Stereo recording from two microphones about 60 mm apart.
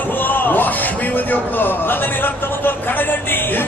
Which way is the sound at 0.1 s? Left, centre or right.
Left.